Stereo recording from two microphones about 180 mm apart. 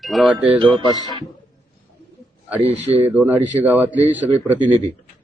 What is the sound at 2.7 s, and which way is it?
Speech, 35° right (ahead or behind).